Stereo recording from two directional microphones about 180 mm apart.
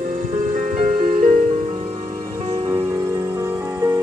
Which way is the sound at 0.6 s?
40° right (ahead or behind).